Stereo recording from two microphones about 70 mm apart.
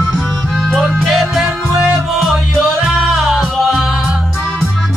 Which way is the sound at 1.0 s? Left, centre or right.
Centre.